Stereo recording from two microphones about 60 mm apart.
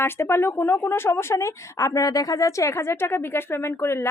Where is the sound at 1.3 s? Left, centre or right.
Left.